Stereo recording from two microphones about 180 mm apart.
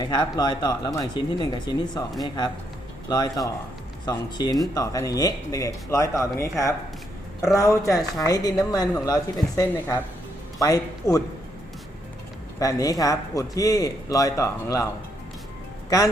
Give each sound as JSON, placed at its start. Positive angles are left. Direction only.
{"t": 0.0, "sound": "a man's voice", "side_deg": 25}
{"t": 12.5, "sound": "a man's voice", "side_deg": 20}